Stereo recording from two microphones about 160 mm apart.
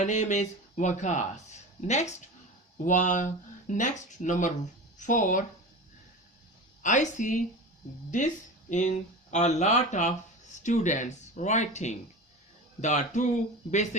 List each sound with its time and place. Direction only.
0.0 s speech: 50° left (ahead or behind)
6.8 s speech: 50° left (ahead or behind)